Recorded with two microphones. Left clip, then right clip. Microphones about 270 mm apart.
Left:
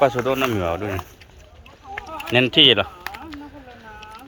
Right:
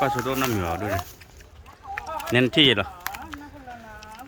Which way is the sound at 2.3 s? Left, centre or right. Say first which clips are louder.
Left 5 dB; centre.